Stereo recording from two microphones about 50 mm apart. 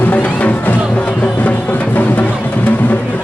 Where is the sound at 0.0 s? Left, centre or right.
Left.